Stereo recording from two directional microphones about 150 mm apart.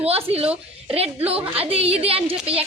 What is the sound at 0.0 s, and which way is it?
Speech, 40° right (ahead or behind).